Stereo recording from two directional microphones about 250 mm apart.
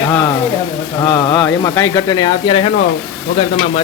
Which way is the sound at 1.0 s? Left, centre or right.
Centre.